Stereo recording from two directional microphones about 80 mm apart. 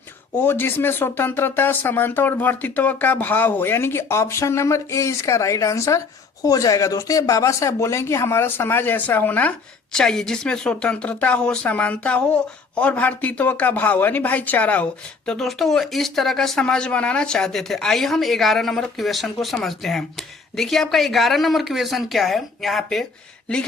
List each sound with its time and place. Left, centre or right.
0.3 s speech: left
9.9 s speech: centre
15.3 s a woman's voice: centre